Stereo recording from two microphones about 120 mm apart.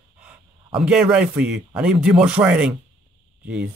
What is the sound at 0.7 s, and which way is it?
Speech, 10° right (ahead or behind).